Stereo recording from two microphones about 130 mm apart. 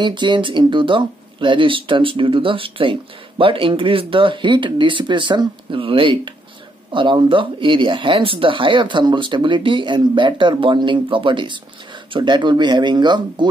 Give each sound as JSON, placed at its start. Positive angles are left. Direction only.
{"t": 0.0, "sound": "speech", "side_deg": -35}